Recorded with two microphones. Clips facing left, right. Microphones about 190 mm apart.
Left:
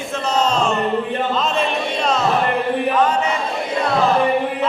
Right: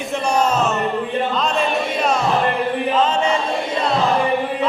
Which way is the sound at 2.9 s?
25° right (ahead or behind).